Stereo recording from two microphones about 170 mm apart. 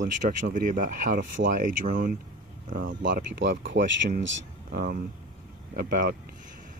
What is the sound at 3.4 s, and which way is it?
Speech, 90° right.